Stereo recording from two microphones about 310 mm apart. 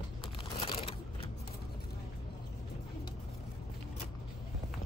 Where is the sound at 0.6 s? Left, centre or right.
Centre.